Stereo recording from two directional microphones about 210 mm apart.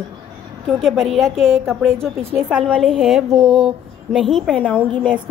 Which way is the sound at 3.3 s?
30° right (ahead or behind).